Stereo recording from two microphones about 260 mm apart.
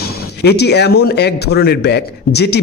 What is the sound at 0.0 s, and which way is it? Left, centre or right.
A man's voice, left.